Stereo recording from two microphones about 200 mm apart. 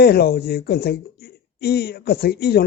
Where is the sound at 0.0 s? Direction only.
50° left (ahead or behind).